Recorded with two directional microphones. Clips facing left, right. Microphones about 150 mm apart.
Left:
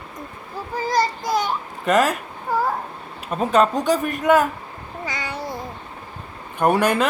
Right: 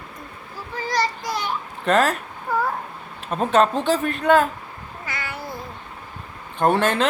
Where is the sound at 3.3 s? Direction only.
5° left (ahead or behind).